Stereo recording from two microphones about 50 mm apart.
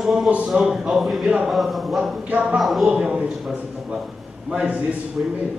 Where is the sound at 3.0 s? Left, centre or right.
Centre.